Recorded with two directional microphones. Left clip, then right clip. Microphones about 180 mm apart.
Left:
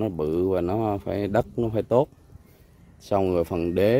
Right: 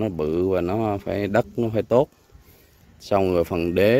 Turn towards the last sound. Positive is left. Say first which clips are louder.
# right 3 dB
turn(degrees=10)  # may be behind; listen again after turning